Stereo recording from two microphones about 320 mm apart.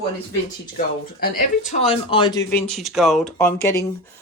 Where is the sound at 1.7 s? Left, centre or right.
Centre.